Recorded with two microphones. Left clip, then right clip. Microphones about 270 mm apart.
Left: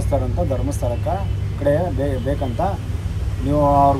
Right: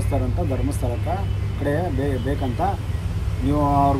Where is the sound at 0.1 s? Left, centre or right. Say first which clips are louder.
Left 5 dB; centre.